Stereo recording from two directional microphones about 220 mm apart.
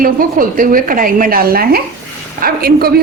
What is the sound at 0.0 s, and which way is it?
A woman's voice, 40° right (ahead or behind).